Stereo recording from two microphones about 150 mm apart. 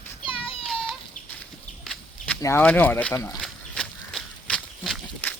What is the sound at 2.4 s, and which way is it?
Speech, 15° left (ahead or behind).